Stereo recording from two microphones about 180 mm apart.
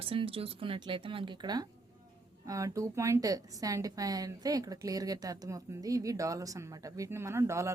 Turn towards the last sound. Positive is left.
turn(degrees=-15)  # may be behind; listen again after turning